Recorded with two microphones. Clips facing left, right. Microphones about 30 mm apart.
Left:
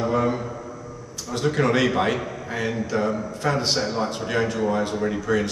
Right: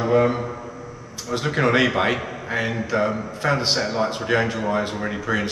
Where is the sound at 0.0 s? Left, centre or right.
Right.